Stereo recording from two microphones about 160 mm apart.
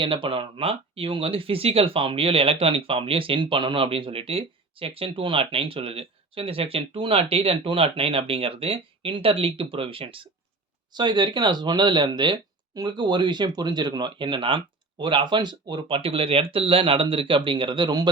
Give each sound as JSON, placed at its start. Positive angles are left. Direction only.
{"t": 0.0, "sound": "speech", "side_deg": -30}